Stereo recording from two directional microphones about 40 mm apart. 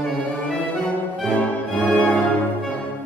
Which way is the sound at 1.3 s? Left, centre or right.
Left.